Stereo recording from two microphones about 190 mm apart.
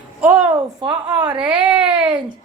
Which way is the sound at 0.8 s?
25° right (ahead or behind).